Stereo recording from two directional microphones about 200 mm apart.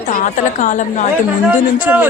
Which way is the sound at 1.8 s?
10° right (ahead or behind).